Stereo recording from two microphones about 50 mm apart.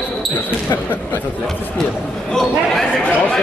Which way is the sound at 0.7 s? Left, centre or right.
Left.